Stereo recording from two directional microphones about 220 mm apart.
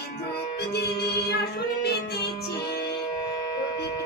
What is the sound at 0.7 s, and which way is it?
Music, 50° left (ahead or behind).